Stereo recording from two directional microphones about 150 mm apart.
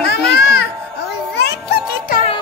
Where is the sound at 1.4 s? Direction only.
90° left.